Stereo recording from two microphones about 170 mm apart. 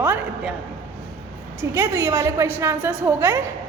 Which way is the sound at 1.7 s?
15° right (ahead or behind).